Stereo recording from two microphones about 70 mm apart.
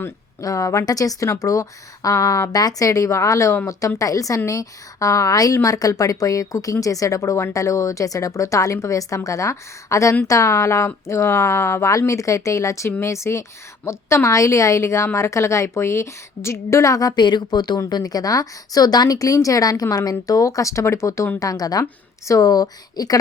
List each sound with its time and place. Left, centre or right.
0.4 s a woman's voice: left
0.9 s a woman's voice: left
11.9 s a woman's voice: left
17.7 s a woman's voice: left
21.3 s a woman's voice: left